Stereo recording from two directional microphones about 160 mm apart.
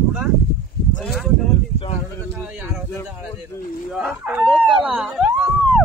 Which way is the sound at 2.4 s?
5° right (ahead or behind).